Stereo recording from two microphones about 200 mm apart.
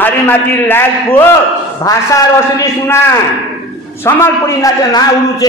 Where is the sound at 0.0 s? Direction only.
10° left (ahead or behind).